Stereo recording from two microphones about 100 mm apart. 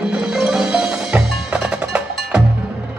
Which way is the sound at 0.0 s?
10° right (ahead or behind).